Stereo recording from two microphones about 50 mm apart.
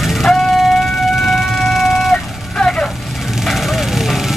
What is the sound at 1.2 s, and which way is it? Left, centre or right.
Music, centre.